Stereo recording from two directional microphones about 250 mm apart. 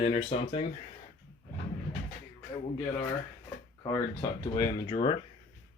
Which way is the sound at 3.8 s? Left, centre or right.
Centre.